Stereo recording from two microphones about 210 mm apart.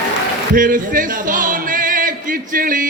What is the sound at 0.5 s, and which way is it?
Music, 40° right (ahead or behind).